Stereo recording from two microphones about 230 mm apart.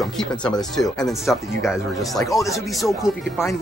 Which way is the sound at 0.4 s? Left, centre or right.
Centre.